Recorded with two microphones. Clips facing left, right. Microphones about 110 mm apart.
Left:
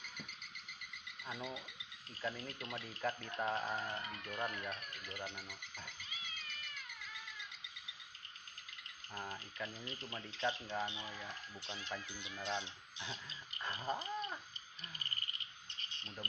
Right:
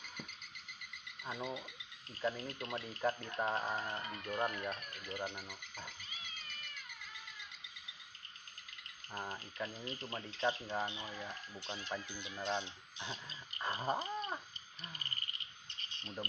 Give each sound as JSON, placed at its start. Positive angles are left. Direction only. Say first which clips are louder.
{"t": 1.2, "sound": "speech", "louder": "right 3 dB", "side_deg": -20}
{"t": 2.2, "sound": "speech", "louder": "right 5 dB", "side_deg": -30}
{"t": 3.0, "sound": "frog", "louder": "right 3 dB", "side_deg": -25}
{"t": 3.8, "sound": "speech", "louder": "right 2 dB", "side_deg": -30}
{"t": 4.6, "sound": "frog", "louder": "right 3 dB", "side_deg": -30}
{"t": 5.1, "sound": "frog", "louder": "right 5 dB", "side_deg": -15}
{"t": 9.1, "sound": "speech", "louder": "right 2 dB", "side_deg": -30}
{"t": 16.0, "sound": "speech", "louder": "right 6 dB", "side_deg": -30}